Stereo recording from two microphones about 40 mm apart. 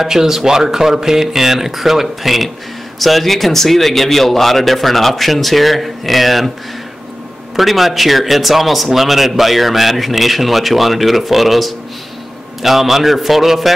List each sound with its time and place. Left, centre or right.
0.0 s speech: centre
7.5 s speech: centre